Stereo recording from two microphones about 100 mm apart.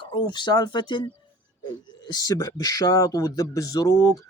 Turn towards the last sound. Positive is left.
turn(degrees=35)  # may be behind; listen again after turning